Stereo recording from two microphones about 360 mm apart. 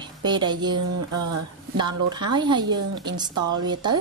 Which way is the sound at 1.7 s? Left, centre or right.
Centre.